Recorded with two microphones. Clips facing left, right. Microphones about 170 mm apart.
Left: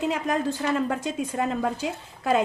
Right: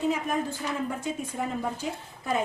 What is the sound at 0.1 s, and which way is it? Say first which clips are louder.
A woman's voice: left 3 dB; 85° left.